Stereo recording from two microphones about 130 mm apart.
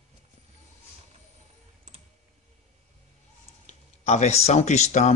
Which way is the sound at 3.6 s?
60° left (ahead or behind).